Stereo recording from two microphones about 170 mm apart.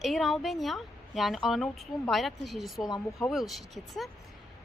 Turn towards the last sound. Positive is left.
turn(degrees=0)  # may be behind; listen again after turning